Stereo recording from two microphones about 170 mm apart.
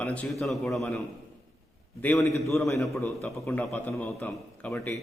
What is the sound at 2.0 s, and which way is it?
A man's voice, 10° left (ahead or behind).